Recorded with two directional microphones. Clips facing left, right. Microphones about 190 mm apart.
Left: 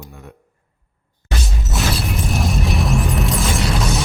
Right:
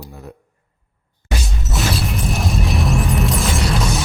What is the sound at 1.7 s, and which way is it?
Music, centre (ahead or behind).